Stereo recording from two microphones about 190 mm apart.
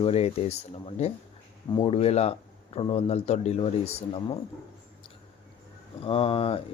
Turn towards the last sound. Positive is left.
turn(degrees=30)  # may be behind; listen again after turning